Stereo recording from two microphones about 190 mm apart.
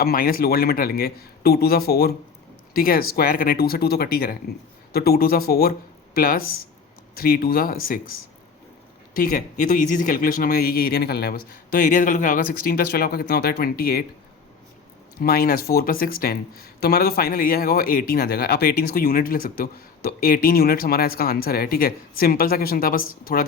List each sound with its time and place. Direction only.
0.0 s speech: 50° left (ahead or behind)
9.1 s speech: 45° left (ahead or behind)
15.2 s speech: 50° left (ahead or behind)